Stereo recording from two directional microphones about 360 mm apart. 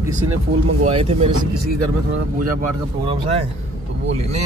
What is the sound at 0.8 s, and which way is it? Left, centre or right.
Speech, centre.